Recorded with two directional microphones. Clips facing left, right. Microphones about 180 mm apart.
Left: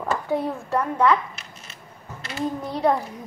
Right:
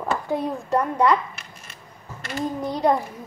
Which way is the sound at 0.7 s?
15° right (ahead or behind).